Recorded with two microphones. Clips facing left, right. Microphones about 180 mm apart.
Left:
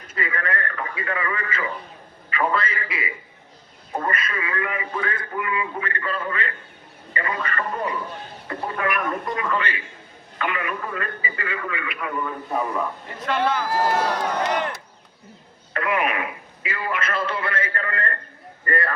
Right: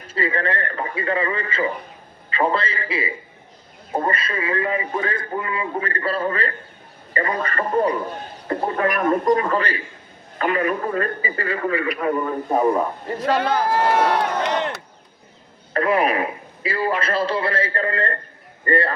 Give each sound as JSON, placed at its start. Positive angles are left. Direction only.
{"t": 0.1, "sound": "a man's voice", "side_deg": -30}
{"t": 13.7, "sound": "speech", "side_deg": -65}
{"t": 15.7, "sound": "a man's voice", "side_deg": -35}